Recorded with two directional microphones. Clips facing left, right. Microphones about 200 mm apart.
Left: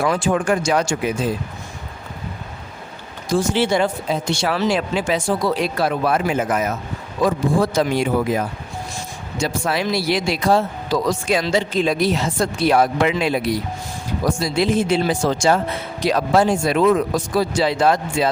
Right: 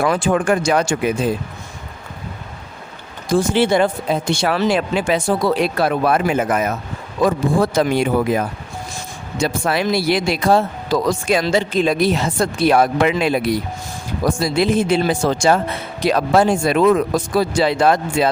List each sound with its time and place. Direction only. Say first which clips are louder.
0.0 s speech: right 2 dB; 60° right (ahead or behind)
3.2 s speech: right 3 dB; 55° right (ahead or behind)